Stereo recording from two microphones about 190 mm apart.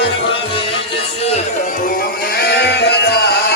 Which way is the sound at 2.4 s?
60° left (ahead or behind).